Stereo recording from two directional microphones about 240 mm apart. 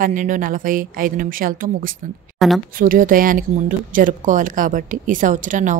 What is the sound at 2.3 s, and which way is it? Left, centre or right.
Speech, centre.